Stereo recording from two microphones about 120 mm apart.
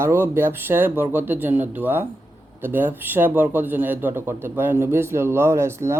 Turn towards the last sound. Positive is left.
turn(degrees=-20)  # may be behind; listen again after turning